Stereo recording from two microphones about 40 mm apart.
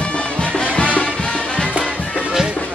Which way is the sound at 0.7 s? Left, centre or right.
Left.